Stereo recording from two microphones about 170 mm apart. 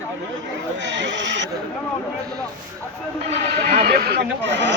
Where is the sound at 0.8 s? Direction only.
90° right.